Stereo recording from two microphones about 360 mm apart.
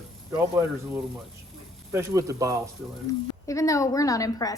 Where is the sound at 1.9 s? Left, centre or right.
Centre.